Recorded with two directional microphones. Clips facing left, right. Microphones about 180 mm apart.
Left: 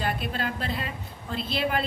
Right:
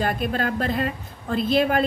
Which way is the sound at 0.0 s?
45° right (ahead or behind).